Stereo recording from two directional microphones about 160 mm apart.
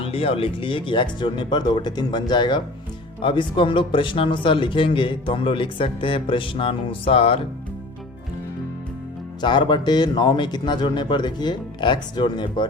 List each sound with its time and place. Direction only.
0.0 s a man's voice: 35° left (ahead or behind)
9.4 s a man's voice: 30° left (ahead or behind)